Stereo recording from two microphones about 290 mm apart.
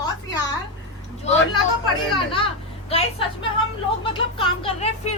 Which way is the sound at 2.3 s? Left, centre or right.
Centre.